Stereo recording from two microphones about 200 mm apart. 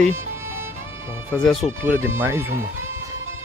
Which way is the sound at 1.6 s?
10° right (ahead or behind).